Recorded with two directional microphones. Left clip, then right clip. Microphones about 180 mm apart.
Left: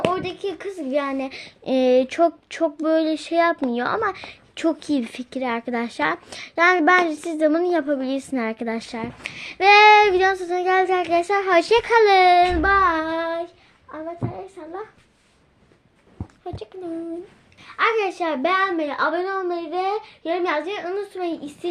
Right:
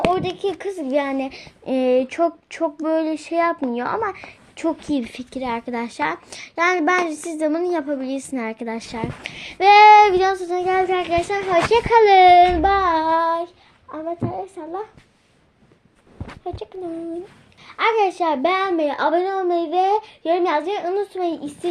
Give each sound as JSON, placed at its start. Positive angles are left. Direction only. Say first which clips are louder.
{"t": 0.1, "sound": "a child's voice", "louder": "right 4 dB", "side_deg": 0}
{"t": 12.7, "sound": "a woman's voice", "louder": "right 1 dB", "side_deg": 5}
{"t": 16.4, "sound": "a child's voice", "louder": "right 4 dB", "side_deg": 0}
{"t": 17.7, "sound": "a woman's voice", "louder": "right 2 dB", "side_deg": 0}